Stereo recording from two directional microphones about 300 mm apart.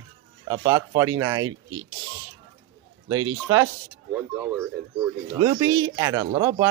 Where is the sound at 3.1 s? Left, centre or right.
Right.